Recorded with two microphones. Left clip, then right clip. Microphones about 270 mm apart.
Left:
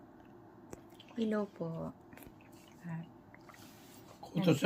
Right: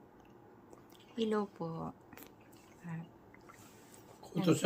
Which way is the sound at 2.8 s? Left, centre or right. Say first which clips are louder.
Left 1 dB; centre.